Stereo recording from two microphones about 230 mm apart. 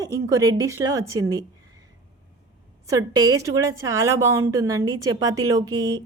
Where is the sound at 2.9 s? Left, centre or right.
Centre.